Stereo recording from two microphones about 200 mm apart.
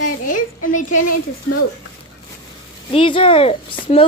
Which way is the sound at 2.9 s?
25° left (ahead or behind).